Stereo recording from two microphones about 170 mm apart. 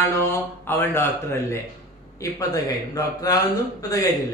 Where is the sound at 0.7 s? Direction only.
15° left (ahead or behind).